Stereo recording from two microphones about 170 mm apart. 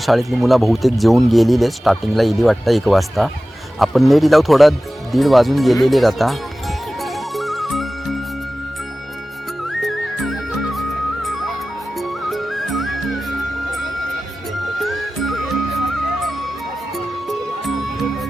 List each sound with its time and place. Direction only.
0.0 s speech: centre (ahead or behind)
5.1 s music: centre (ahead or behind)
9.6 s music: centre (ahead or behind)